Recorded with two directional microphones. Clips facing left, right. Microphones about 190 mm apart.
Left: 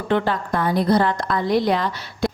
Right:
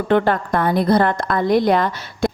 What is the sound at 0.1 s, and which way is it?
A woman's voice, 55° right (ahead or behind).